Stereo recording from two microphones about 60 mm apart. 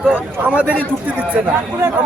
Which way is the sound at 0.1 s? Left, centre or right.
Right.